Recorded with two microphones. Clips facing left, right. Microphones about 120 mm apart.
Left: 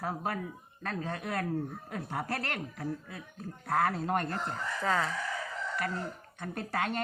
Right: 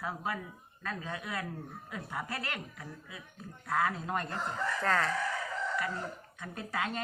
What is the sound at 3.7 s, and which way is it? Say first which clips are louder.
Speech: left 3 dB; 60° left (ahead or behind).